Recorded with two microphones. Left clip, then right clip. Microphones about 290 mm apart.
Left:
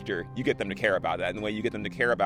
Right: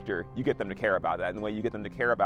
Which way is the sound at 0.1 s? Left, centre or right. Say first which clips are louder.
Left 1 dB; right.